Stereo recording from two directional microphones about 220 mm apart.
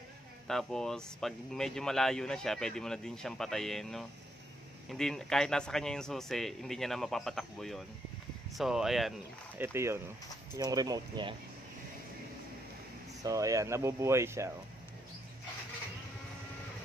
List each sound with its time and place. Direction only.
0.5 s speech: centre (ahead or behind)
9.6 s speech: 10° right (ahead or behind)
13.2 s speech: 15° right (ahead or behind)